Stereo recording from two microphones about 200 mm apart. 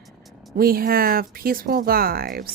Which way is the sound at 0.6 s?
45° right (ahead or behind).